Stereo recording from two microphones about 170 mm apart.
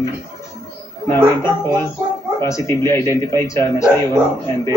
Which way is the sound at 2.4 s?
15° left (ahead or behind).